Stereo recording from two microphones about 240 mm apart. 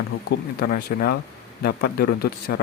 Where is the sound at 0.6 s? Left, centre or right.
Left.